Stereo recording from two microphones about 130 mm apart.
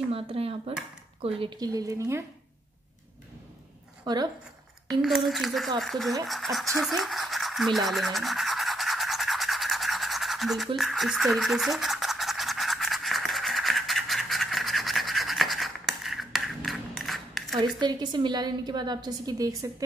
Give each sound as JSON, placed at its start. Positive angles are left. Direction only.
{"t": 0.1, "sound": "speech", "side_deg": -45}
{"t": 1.6, "sound": "speech", "side_deg": -30}
{"t": 4.0, "sound": "speech", "side_deg": -35}
{"t": 5.0, "sound": "speech", "side_deg": 0}
{"t": 6.2, "sound": "toothbrush", "side_deg": 0}
{"t": 10.8, "sound": "scratch", "side_deg": 0}
{"t": 17.6, "sound": "a woman's voice", "side_deg": -35}